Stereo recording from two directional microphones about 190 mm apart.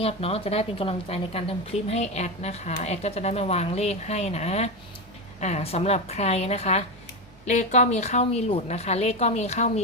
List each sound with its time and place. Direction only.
0.0 s a woman's voice: 30° left (ahead or behind)